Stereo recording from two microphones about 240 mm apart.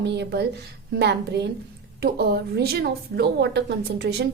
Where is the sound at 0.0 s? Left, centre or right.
Right.